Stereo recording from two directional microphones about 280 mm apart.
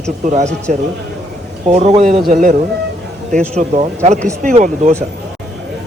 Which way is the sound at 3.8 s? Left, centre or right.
Right.